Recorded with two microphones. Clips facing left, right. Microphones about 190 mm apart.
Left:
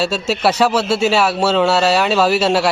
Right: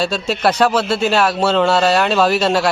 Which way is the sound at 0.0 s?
5° left (ahead or behind).